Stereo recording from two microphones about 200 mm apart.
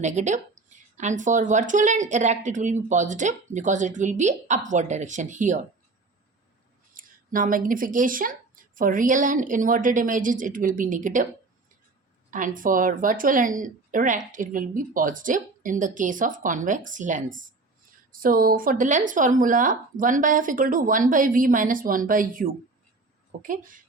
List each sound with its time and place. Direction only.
0.0 s a woman's voice: 35° right (ahead or behind)
6.9 s a woman's voice: 45° right (ahead or behind)
12.3 s a woman's voice: 40° right (ahead or behind)